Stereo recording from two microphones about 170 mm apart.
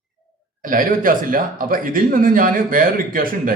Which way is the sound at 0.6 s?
55° right (ahead or behind).